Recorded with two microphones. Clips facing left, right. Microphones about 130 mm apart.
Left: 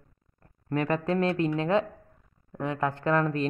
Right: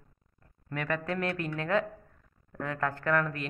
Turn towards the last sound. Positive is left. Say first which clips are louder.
# left 4 dB
turn(degrees=30)  # may be behind; listen again after turning